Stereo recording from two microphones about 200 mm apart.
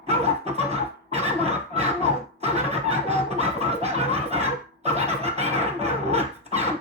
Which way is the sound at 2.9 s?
30° right (ahead or behind).